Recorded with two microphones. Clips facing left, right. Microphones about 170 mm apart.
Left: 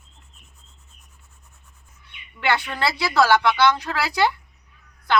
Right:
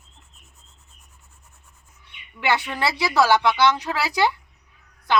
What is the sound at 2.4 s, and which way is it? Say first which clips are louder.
Speech: even; 15° right (ahead or behind).